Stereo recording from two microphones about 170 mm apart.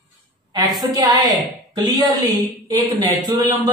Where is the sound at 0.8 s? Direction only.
25° right (ahead or behind).